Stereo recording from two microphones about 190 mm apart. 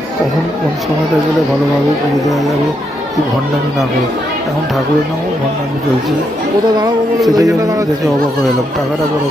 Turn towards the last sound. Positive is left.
turn(degrees=-20)  # may be behind; listen again after turning